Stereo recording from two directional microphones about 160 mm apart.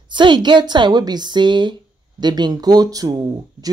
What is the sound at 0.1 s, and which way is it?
A woman's voice, 30° right (ahead or behind).